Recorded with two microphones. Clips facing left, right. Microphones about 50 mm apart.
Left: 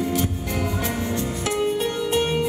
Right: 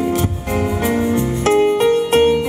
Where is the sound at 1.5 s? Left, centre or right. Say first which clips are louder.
Right 11 dB; right.